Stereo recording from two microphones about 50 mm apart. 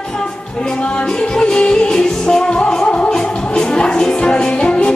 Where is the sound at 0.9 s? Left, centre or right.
Centre.